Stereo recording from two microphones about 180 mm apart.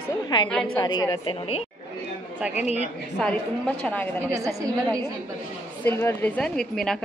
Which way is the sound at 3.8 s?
5° left (ahead or behind).